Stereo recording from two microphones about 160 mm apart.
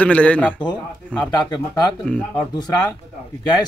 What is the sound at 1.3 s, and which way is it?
Speech, 25° left (ahead or behind).